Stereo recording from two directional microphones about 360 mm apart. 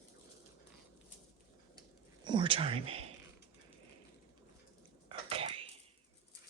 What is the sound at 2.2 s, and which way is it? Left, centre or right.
Speech, centre.